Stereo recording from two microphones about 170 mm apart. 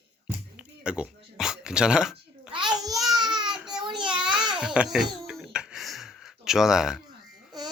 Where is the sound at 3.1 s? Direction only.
25° right (ahead or behind).